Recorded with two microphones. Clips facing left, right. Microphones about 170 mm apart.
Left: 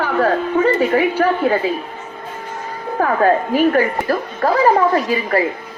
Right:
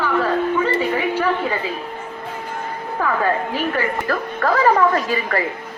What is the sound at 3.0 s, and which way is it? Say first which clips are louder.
A woman's voice: left 5 dB; 45° left (ahead or behind).